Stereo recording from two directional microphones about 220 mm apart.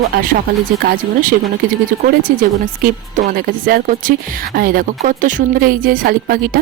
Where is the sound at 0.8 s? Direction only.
40° right (ahead or behind).